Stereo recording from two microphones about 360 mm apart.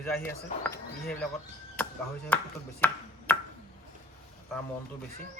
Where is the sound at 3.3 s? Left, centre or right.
Centre.